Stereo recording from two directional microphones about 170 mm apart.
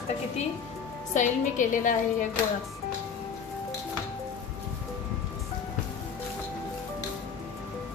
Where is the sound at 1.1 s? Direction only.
50° left (ahead or behind).